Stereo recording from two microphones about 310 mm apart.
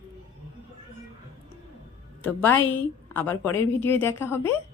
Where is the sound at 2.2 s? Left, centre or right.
Centre.